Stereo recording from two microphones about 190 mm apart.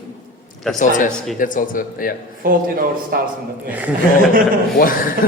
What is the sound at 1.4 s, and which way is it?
Speech, 45° left (ahead or behind).